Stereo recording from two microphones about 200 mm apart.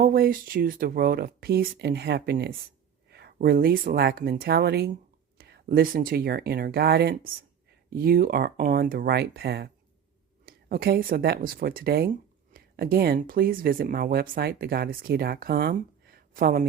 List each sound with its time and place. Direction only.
0.0 s speech: 50° right (ahead or behind)
3.1 s a sound: 55° right (ahead or behind)
3.3 s speech: 50° right (ahead or behind)